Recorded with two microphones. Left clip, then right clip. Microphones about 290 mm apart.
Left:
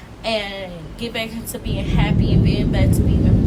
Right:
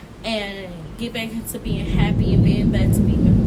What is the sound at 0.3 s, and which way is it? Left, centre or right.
A woman's voice, centre.